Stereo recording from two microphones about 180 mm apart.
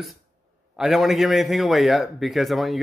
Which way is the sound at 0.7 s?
Centre (ahead or behind).